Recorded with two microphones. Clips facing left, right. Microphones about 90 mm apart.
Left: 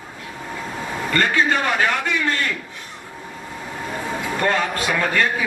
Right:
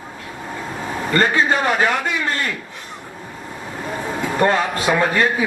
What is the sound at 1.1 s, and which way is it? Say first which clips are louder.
Speech: right 2 dB; 30° right (ahead or behind).